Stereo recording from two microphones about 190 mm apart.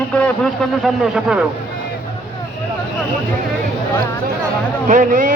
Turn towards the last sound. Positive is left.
turn(degrees=-45)  # may be behind; listen again after turning